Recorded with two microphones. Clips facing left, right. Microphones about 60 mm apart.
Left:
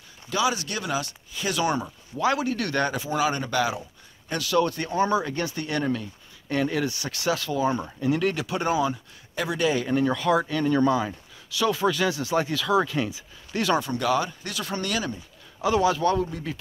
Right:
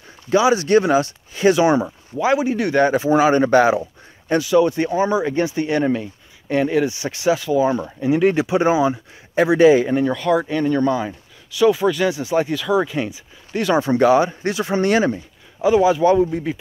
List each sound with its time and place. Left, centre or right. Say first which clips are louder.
0.3 s speech: right 11 dB; right
1.6 s speech: right 9 dB; right
2.9 s speech: right 10 dB; right
4.4 s speech: right 7 dB; centre
10.0 s speech: right 4 dB; centre
10.4 s speech: right 5 dB; centre
10.7 s speech: right 1 dB; centre
13.7 s speech: right 10 dB; right
15.6 s speech: right 7 dB; centre